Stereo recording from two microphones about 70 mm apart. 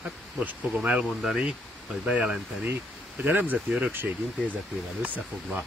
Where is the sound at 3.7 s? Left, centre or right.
Centre.